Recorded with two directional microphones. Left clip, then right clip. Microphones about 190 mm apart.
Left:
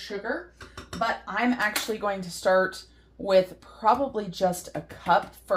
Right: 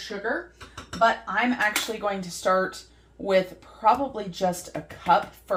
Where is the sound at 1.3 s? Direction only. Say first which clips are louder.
Right 2 dB; 40° left (ahead or behind).